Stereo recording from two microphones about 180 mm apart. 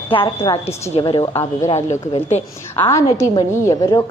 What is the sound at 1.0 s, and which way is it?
Speech, 25° left (ahead or behind).